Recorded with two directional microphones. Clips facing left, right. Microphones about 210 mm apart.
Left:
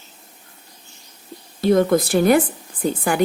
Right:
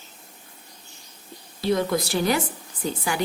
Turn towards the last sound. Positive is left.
turn(degrees=50)  # may be behind; listen again after turning